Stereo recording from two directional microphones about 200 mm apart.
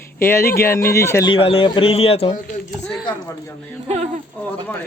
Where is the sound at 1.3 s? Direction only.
30° left (ahead or behind).